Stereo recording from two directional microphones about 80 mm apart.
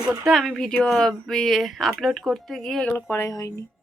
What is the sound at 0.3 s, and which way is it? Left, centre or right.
Speech, centre.